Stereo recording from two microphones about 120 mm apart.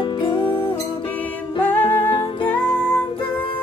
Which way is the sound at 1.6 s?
15° left (ahead or behind).